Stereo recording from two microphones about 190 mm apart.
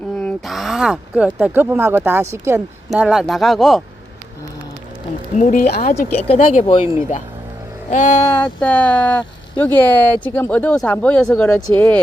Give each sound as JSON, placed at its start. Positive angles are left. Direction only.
{"t": 0.2, "sound": "speech", "side_deg": 0}
{"t": 2.9, "sound": "speech", "side_deg": -5}
{"t": 5.4, "sound": "speech", "side_deg": 40}
{"t": 7.9, "sound": "speech", "side_deg": 40}
{"t": 8.2, "sound": "speech", "side_deg": 10}